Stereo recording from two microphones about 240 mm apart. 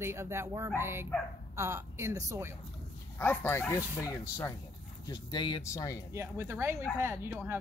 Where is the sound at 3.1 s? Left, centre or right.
Centre.